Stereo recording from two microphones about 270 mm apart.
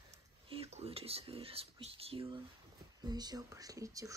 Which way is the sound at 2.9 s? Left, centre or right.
Centre.